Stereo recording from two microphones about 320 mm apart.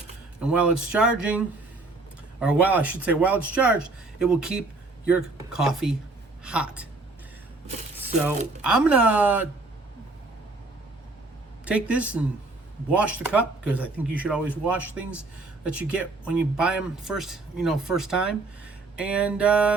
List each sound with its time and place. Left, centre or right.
0.3 s a woman's voice: centre
7.9 s crumpling: centre
8.6 s speech: centre
11.6 s speech: centre